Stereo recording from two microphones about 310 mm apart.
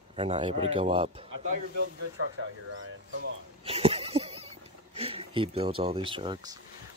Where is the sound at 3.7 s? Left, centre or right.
Centre.